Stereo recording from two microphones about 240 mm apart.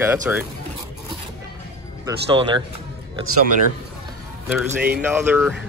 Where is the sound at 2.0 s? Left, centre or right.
Centre.